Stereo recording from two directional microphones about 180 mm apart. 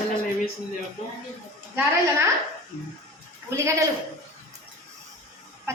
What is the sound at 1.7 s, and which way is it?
Speech, 15° right (ahead or behind).